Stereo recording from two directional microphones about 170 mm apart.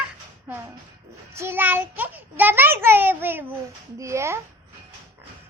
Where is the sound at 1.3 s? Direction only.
15° right (ahead or behind).